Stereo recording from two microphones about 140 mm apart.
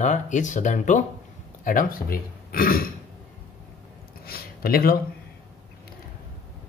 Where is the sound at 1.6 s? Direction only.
75° left (ahead or behind).